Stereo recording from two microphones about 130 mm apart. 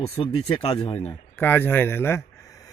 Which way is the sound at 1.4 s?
15° left (ahead or behind).